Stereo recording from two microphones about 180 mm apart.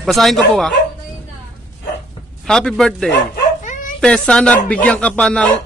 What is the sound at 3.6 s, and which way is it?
Dog, 45° left (ahead or behind).